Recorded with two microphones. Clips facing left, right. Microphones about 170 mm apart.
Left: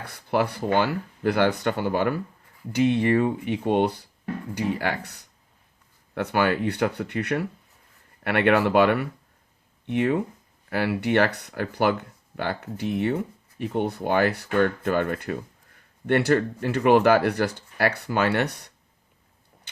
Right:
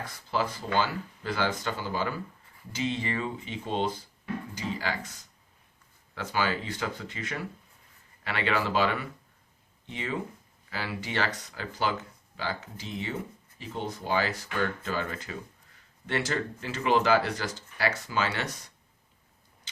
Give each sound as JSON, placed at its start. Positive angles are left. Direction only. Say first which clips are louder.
{"t": 0.0, "sound": "speech", "louder": "left 6 dB", "side_deg": 65}